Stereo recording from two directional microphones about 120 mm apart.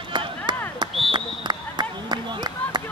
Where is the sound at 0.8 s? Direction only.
40° right (ahead or behind).